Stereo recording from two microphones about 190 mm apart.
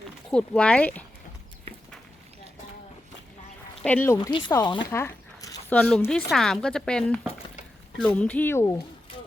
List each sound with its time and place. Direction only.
0.3 s speech: 5° left (ahead or behind)
3.8 s speech: 10° left (ahead or behind)
4.3 s speech: 25° left (ahead or behind)